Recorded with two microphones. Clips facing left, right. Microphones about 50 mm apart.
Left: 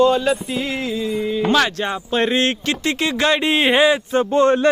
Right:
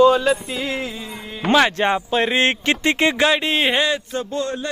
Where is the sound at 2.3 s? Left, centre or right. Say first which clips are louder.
Right 1 dB; right.